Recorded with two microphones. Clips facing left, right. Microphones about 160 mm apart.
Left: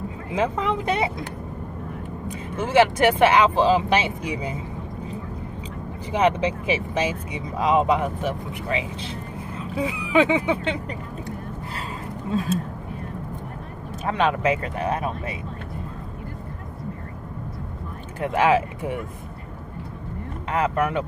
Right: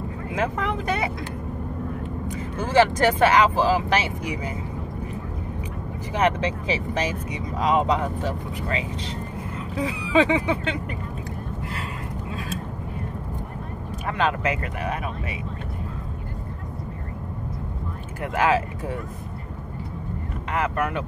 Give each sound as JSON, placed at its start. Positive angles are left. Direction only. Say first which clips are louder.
{"t": 0.4, "sound": "speech", "louder": "left 3 dB", "side_deg": 20}
{"t": 2.5, "sound": "speech", "louder": "left 1 dB", "side_deg": 20}
{"t": 6.1, "sound": "speech", "louder": "left 2 dB", "side_deg": 10}
{"t": 14.0, "sound": "speech", "louder": "left 3 dB", "side_deg": 25}
{"t": 18.2, "sound": "speech", "louder": "left 2 dB", "side_deg": 25}
{"t": 20.5, "sound": "speech", "louder": "left 3 dB", "side_deg": 25}